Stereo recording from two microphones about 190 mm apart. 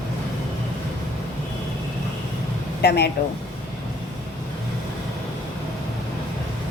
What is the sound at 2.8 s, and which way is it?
Speech, 60° left (ahead or behind).